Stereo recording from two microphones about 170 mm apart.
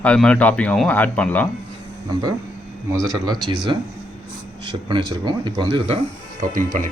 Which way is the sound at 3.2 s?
25° right (ahead or behind).